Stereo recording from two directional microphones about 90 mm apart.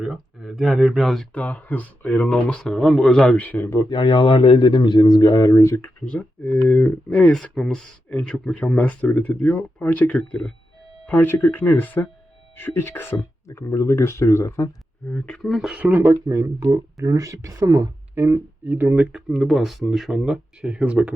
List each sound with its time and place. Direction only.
0.4 s speech: centre (ahead or behind)
1.3 s speech: 15° left (ahead or behind)
3.8 s a man's voice: 65° left (ahead or behind); by 5.8 s 35° left (ahead or behind)
5.8 s speech: 15° left (ahead or behind); by 14.7 s 30° left (ahead or behind)
15.0 s speech: 15° left (ahead or behind)
15.4 s speech: centre (ahead or behind)
15.7 s speech: 20° right (ahead or behind); by 17.8 s 40° right (ahead or behind)
18.1 s speech: 25° right (ahead or behind)
19.1 s speech: centre (ahead or behind)